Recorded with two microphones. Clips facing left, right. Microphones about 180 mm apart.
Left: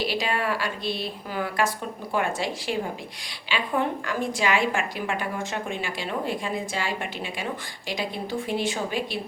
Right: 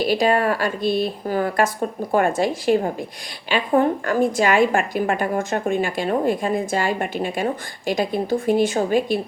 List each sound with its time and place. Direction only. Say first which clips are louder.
0.0 s a woman's voice: right 8 dB; 45° right (ahead or behind)